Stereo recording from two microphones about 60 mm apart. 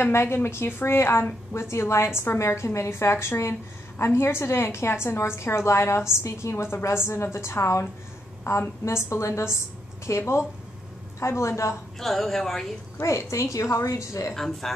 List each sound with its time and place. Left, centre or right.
0.0 s a woman's voice: left
12.0 s speech: centre
13.0 s a woman's voice: left
14.3 s speech: centre